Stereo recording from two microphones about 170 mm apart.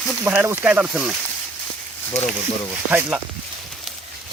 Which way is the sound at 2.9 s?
10° right (ahead or behind).